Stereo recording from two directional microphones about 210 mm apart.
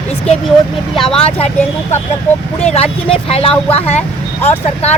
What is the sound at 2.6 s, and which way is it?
Speech, 30° left (ahead or behind).